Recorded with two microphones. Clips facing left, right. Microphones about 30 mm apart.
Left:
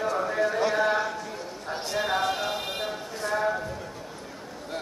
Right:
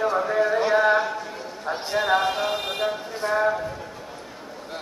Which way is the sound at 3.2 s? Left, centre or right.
Right.